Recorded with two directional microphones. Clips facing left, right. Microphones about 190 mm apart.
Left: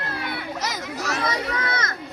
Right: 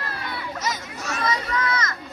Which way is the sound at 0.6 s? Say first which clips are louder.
Left 2 dB; 75° left (ahead or behind).